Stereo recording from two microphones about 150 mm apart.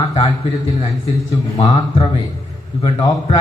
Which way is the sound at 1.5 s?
40° left (ahead or behind).